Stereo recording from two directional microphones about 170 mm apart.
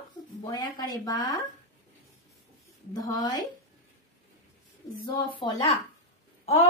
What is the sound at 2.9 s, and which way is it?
Speech, 25° left (ahead or behind).